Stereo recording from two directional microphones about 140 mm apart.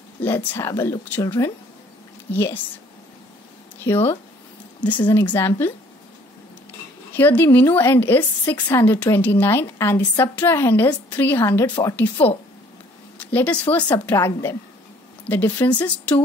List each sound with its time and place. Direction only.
0.2 s a woman's voice: 15° left (ahead or behind)
3.8 s a woman's voice: 15° left (ahead or behind)
7.2 s a woman's voice: 15° left (ahead or behind)